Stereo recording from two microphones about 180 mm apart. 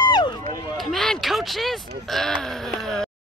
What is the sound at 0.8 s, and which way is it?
Speech, centre (ahead or behind).